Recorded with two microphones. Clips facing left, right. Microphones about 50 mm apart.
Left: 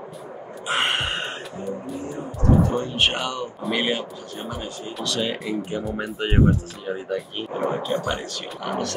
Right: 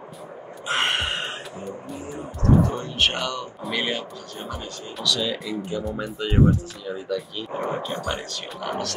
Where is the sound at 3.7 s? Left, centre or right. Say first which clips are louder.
Left 2 dB; left.